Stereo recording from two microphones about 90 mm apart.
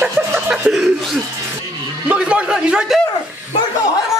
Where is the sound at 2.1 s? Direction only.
10° right (ahead or behind).